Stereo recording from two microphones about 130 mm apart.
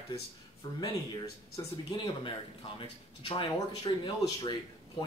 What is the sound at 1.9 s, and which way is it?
Speech, 35° left (ahead or behind).